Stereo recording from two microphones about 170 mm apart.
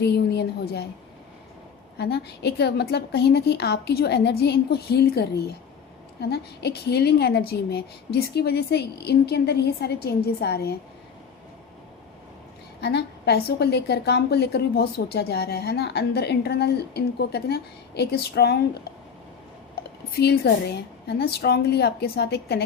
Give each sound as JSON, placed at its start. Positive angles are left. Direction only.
{"t": 0.0, "sound": "a woman's voice", "side_deg": 75}
{"t": 2.0, "sound": "a woman's voice", "side_deg": 75}
{"t": 12.8, "sound": "a woman's voice", "side_deg": 80}
{"t": 20.1, "sound": "a woman's voice", "side_deg": 70}